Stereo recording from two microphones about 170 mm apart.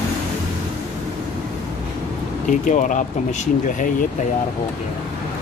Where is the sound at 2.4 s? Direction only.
50° left (ahead or behind).